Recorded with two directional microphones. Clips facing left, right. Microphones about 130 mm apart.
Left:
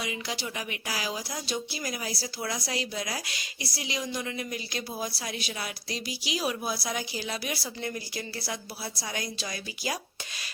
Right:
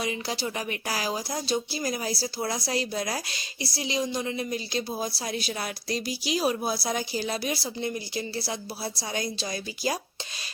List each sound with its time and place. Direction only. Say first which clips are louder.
0.0 s speech: right 4 dB; 35° right (ahead or behind)